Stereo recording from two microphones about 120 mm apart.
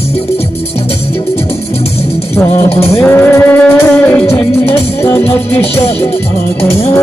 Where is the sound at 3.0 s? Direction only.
15° left (ahead or behind).